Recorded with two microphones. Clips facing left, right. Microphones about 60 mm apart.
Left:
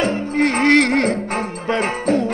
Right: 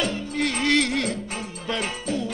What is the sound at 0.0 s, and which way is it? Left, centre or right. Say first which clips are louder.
Music: left 8 dB; left.